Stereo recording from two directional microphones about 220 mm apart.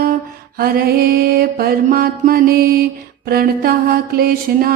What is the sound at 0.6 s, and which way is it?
Mantra, 45° right (ahead or behind).